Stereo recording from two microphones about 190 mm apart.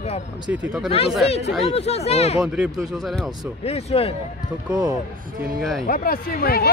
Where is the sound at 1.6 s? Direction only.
30° left (ahead or behind).